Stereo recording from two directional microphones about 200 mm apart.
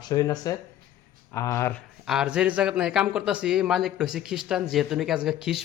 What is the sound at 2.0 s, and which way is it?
Speech, 5° right (ahead or behind).